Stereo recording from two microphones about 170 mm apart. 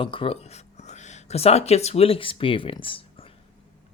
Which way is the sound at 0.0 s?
30° left (ahead or behind).